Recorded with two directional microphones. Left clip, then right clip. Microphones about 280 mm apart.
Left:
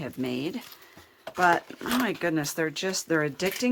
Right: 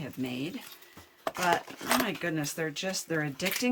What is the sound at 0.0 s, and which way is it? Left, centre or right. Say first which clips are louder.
Speech: left 5 dB; centre.